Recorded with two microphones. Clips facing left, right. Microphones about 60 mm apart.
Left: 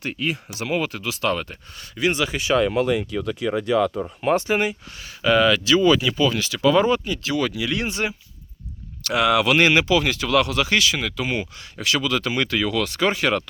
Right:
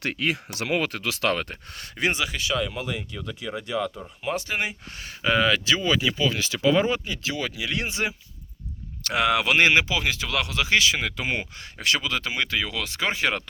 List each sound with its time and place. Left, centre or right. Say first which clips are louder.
0.0 s speech: even; right
0.5 s speech: left 1 dB; right
2.6 s speech: left 9 dB; left
5.2 s speech: left 4 dB; centre
9.0 s speech: left 4 dB; right